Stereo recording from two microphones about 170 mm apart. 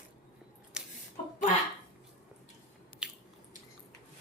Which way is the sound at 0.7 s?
5° right (ahead or behind).